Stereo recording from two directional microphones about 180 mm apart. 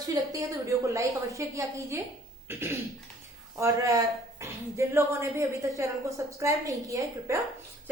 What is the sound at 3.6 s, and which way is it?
A woman's voice, 20° right (ahead or behind).